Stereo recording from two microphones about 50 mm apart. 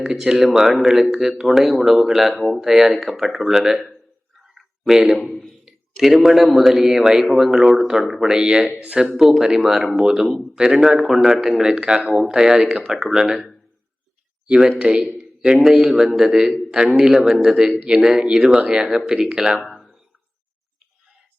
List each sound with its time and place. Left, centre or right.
0.0 s speech: centre
4.4 s a sound: centre
5.2 s a man's voice: centre
5.6 s a sound: centre
6.2 s speech: centre
8.8 s speech: right
9.1 s speech: centre
10.9 s speech: centre
11.9 s speech: centre
19.7 s a sound: centre